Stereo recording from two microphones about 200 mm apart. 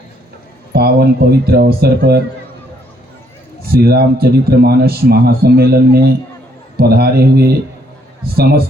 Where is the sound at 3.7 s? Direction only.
50° right (ahead or behind).